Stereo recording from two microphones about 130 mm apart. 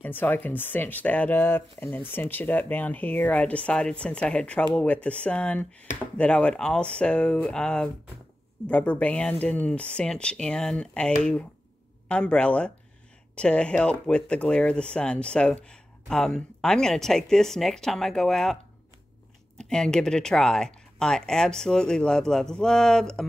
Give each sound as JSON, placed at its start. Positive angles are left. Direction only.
{"t": 0.0, "sound": "speech", "side_deg": 15}